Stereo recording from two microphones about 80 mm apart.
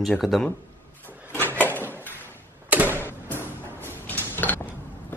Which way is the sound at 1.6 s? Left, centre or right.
Left.